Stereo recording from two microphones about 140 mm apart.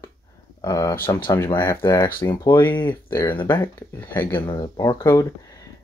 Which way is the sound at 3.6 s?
15° left (ahead or behind).